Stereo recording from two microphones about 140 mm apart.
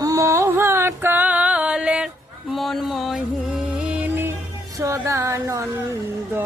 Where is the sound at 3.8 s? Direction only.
10° right (ahead or behind).